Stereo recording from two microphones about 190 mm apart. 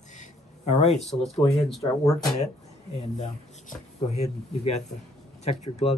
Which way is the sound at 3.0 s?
35° left (ahead or behind).